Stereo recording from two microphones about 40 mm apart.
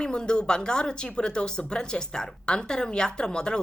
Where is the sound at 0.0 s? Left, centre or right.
Left.